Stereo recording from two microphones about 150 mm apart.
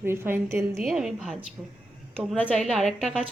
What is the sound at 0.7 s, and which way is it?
Speech, centre (ahead or behind).